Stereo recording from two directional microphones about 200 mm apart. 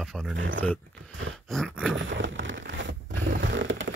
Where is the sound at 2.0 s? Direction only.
65° right (ahead or behind).